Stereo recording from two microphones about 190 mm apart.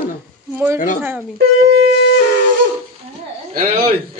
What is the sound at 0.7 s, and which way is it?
Speech, 40° left (ahead or behind).